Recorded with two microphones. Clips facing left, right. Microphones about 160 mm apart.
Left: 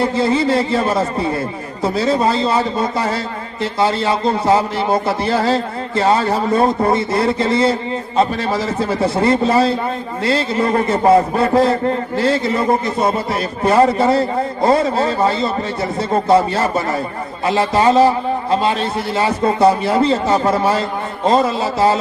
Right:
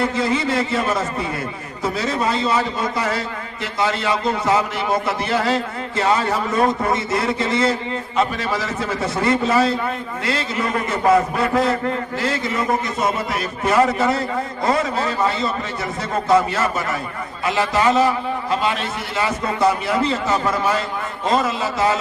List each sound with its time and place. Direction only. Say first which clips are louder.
0.0 s a man's voice: left 4 dB; 30° left (ahead or behind)